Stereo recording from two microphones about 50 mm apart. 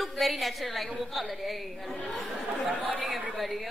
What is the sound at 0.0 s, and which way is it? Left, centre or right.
A woman's voice, centre.